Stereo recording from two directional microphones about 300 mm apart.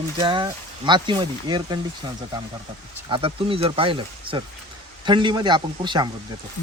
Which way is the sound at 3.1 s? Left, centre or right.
Centre.